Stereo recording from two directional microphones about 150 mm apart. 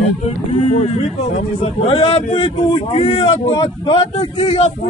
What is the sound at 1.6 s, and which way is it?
A man's voice, 40° left (ahead or behind).